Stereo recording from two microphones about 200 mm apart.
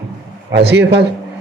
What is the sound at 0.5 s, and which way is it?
Speech, 55° right (ahead or behind).